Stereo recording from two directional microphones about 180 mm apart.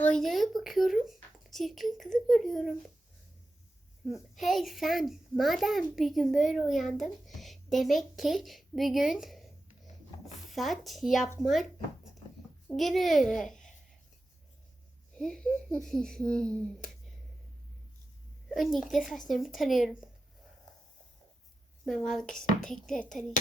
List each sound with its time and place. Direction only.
0.0 s a child's voice: 5° left (ahead or behind)
4.1 s a child's voice: centre (ahead or behind)
10.5 s a child's voice: centre (ahead or behind)
12.6 s a child's voice: centre (ahead or behind)
15.2 s a child's voice: 5° left (ahead or behind)
18.4 s a child's voice: centre (ahead or behind)
21.8 s a child's voice: centre (ahead or behind)